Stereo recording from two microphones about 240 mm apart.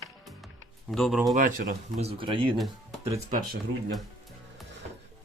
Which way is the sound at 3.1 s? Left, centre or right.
Right.